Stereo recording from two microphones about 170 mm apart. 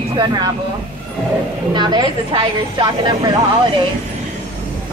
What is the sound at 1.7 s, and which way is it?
A woman's voice, 25° right (ahead or behind).